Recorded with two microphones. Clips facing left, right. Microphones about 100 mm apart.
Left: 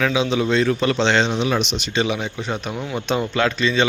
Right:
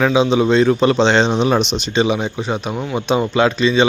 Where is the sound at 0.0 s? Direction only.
25° right (ahead or behind).